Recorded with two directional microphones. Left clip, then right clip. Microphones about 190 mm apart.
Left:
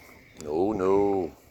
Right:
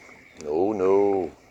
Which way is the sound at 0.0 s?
65° left (ahead or behind).